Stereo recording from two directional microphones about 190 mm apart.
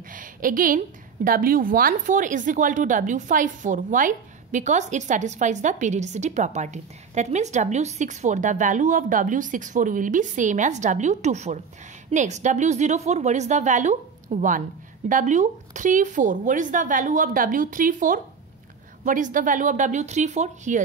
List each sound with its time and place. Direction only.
0.1 s a woman's voice: 45° right (ahead or behind)